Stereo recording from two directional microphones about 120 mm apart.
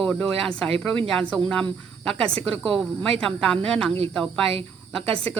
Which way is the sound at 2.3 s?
50° right (ahead or behind).